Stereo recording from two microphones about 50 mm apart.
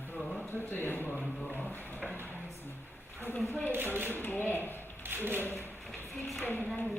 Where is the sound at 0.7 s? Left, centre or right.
Left.